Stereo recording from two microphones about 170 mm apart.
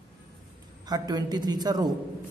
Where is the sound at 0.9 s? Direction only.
25° right (ahead or behind).